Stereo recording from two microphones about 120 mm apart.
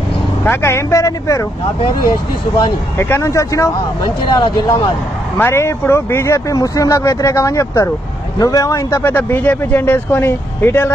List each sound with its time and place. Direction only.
0.4 s speech: 20° left (ahead or behind)
3.0 s speech: 20° left (ahead or behind)
4.4 s speech: 40° left (ahead or behind)
5.4 s speech: 20° left (ahead or behind)